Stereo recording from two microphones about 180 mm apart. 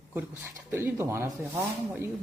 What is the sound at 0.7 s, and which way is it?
Speech, 10° right (ahead or behind).